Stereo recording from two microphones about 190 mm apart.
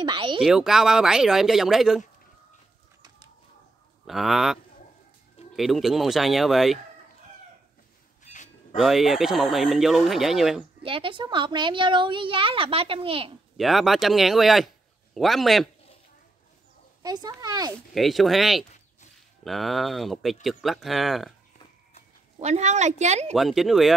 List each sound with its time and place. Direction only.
0.0 s a sound: 25° right (ahead or behind)
0.4 s speech: 5° right (ahead or behind)
4.0 s speech: centre (ahead or behind)
5.6 s speech: centre (ahead or behind)
8.2 s a sound: 40° left (ahead or behind)
8.7 s speech: centre (ahead or behind)
10.8 s a woman's voice: 30° right (ahead or behind)
13.6 s speech: centre (ahead or behind)
17.0 s a woman's voice: 20° right (ahead or behind)
17.9 s speech: centre (ahead or behind)
22.4 s a woman's voice: 35° right (ahead or behind)
23.3 s speech: centre (ahead or behind)